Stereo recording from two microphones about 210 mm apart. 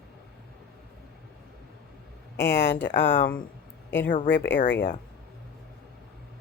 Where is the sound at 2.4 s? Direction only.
10° left (ahead or behind).